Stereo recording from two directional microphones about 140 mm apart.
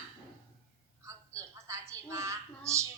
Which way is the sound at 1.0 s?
20° right (ahead or behind).